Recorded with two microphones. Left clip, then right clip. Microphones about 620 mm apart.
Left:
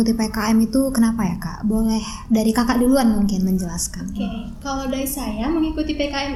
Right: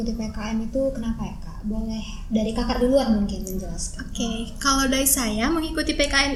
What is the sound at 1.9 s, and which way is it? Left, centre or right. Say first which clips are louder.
A woman's voice: left 7 dB; left.